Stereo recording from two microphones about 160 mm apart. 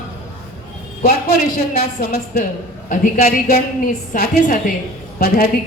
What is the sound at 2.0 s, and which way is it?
A woman's voice, 65° left (ahead or behind).